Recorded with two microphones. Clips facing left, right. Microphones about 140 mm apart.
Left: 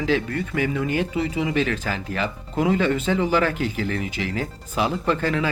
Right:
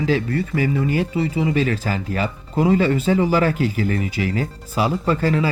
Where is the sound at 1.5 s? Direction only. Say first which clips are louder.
Right 1 dB; 40° right (ahead or behind).